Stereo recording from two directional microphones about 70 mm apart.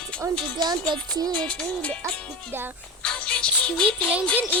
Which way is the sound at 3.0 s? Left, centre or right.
Centre.